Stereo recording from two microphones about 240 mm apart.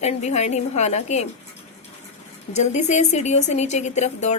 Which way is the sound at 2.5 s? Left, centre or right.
Left.